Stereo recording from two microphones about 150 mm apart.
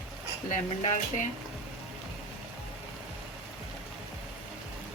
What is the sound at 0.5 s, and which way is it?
Speech, 55° left (ahead or behind).